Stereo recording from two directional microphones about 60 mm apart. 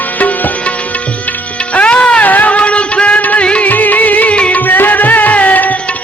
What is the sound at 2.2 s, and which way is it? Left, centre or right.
Music, left.